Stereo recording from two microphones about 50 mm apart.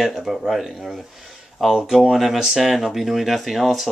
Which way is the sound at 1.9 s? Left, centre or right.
Centre.